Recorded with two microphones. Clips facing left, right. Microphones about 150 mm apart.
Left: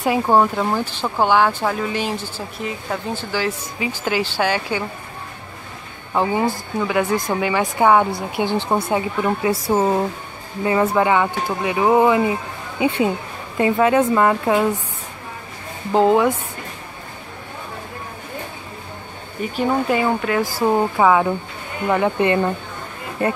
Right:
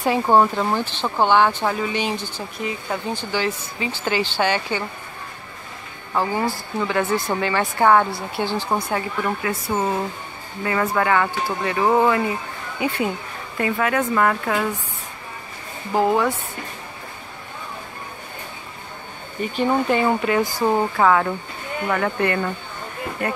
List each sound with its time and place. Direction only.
0.0 s speech: 5° left (ahead or behind)
6.1 s speech: 20° left (ahead or behind)
7.1 s speech: 10° right (ahead or behind)
7.3 s speech: 10° left (ahead or behind)
9.5 s speech: 30° left (ahead or behind)
15.9 s speech: 20° left (ahead or behind)
19.4 s speech: 5° left (ahead or behind); by 23.3 s 25° left (ahead or behind)